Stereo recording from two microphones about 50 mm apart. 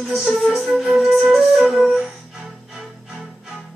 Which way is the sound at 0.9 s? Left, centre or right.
Centre.